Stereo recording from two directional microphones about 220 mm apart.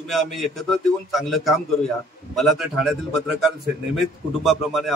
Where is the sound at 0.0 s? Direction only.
Centre (ahead or behind).